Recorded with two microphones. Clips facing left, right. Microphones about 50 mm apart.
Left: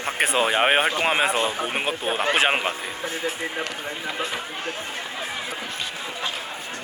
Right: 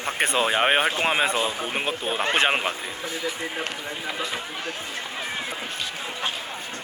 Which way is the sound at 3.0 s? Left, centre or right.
Left.